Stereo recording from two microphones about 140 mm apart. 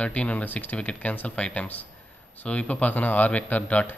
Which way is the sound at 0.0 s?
10° left (ahead or behind).